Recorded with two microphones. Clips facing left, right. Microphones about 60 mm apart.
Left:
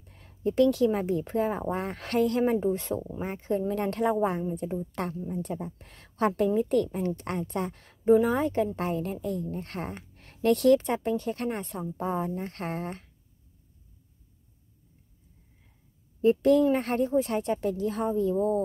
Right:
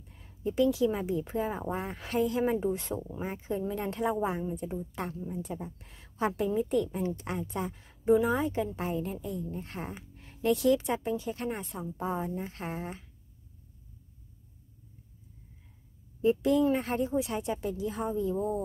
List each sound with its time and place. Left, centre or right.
0.2 s speech: left
2.6 s a woman's voice: left
3.3 s speech: left
4.3 s a woman's voice: centre
4.6 s speech: left
8.0 s speech: left
11.8 s a woman's voice: left
12.4 s speech: left
16.2 s speech: left